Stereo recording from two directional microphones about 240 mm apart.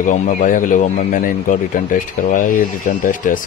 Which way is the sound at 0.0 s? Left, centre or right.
Left.